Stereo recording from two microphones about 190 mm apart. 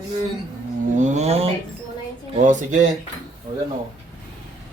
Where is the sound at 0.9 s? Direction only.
40° right (ahead or behind).